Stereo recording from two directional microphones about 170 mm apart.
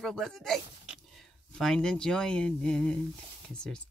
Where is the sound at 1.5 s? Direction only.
5° left (ahead or behind).